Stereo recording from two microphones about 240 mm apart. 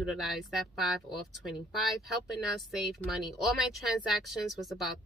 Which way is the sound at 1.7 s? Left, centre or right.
Centre.